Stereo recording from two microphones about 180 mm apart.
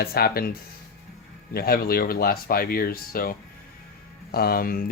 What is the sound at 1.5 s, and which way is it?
Speech, 55° left (ahead or behind).